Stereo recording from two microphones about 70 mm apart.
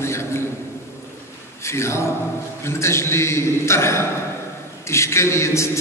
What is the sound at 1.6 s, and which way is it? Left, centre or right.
A man's voice, left.